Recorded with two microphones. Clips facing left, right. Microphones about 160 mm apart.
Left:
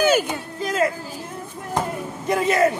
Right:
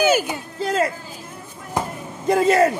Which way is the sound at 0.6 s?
35° right (ahead or behind).